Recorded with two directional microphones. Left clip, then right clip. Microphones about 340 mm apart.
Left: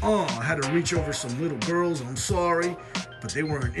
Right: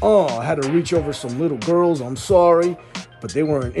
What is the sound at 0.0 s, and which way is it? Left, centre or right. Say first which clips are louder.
Music: right 9 dB; centre.